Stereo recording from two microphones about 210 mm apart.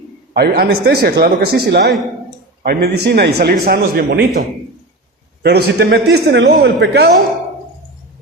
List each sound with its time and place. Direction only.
0.3 s a man's voice: 45° right (ahead or behind)
5.4 s a man's voice: 50° right (ahead or behind)